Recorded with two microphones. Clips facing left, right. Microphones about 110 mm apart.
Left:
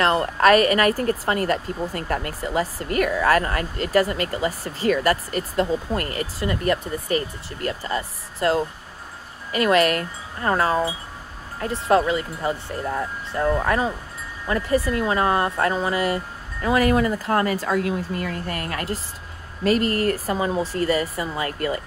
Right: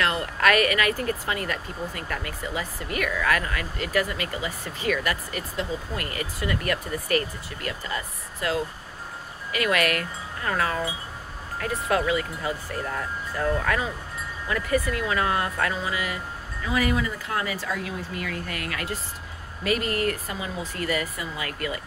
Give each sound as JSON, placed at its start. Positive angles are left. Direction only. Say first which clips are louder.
{"t": 0.0, "sound": "speech", "louder": "left 6 dB", "side_deg": 35}
{"t": 7.6, "sound": "speech", "louder": "left 6 dB", "side_deg": 35}